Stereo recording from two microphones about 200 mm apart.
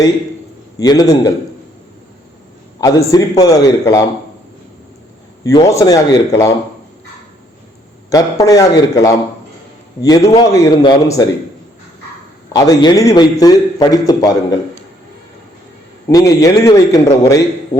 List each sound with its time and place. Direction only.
0.8 s a man's voice: 20° left (ahead or behind)
2.8 s a man's voice: 15° left (ahead or behind)
5.4 s a man's voice: 15° left (ahead or behind)
8.1 s a man's voice: 15° left (ahead or behind)
12.5 s a man's voice: 20° left (ahead or behind)
16.0 s a man's voice: 15° left (ahead or behind)